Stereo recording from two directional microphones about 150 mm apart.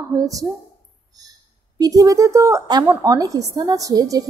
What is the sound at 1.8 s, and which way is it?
A woman's voice, 25° right (ahead or behind).